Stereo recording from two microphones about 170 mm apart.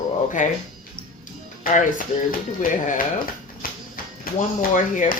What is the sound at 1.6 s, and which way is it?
Speech, 50° left (ahead or behind).